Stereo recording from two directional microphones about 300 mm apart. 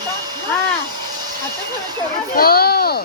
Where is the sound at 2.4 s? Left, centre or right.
Left.